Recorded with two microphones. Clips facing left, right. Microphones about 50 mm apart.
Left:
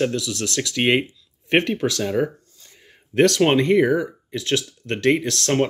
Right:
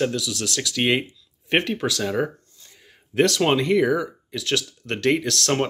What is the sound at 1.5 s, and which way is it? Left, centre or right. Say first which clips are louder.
Speech: left 3 dB; left.